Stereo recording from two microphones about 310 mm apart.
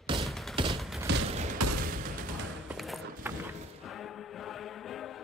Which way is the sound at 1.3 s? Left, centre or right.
Right.